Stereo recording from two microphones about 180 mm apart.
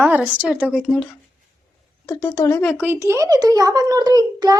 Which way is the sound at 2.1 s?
10° left (ahead or behind).